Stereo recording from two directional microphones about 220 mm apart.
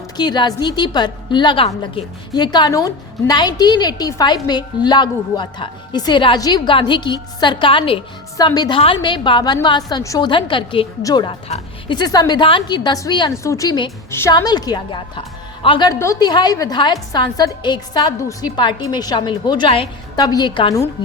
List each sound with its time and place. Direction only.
0.2 s a woman's voice: 20° left (ahead or behind)